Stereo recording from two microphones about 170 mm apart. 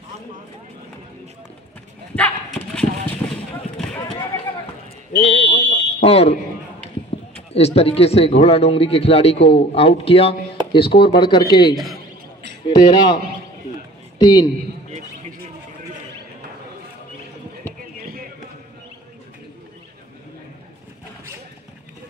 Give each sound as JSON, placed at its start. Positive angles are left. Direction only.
{"t": 2.1, "sound": "clip-clop", "side_deg": 5}
{"t": 5.1, "sound": "a sound", "side_deg": 35}
{"t": 5.6, "sound": "fire alarm", "side_deg": 35}
{"t": 7.5, "sound": "speech", "side_deg": 35}
{"t": 11.7, "sound": "a man's voice", "side_deg": 0}
{"t": 12.6, "sound": "a man's voice", "side_deg": 25}